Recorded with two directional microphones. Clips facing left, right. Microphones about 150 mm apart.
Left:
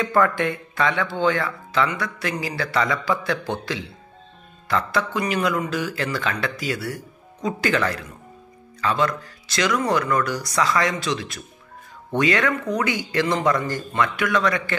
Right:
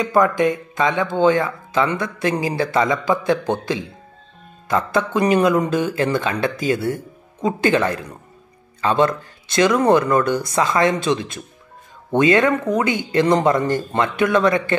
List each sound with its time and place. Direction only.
0.0 s a man's voice: 15° right (ahead or behind)